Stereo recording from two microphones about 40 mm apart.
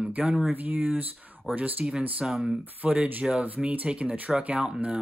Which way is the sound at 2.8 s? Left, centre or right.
Right.